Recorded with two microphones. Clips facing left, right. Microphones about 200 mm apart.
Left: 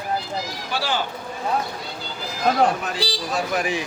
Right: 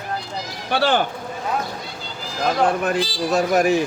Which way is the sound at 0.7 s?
60° right (ahead or behind).